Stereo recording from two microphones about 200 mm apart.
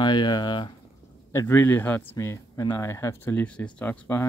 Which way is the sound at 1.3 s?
15° left (ahead or behind).